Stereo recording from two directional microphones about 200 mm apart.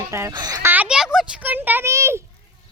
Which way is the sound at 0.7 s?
5° right (ahead or behind).